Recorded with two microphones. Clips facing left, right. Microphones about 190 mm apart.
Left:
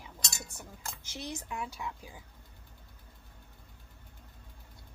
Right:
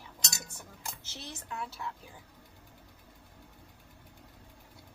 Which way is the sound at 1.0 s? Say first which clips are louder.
Left 5 dB; 15° left (ahead or behind).